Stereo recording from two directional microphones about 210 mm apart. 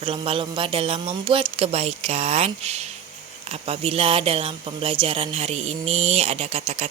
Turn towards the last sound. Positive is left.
turn(degrees=-30)  # may be behind; listen again after turning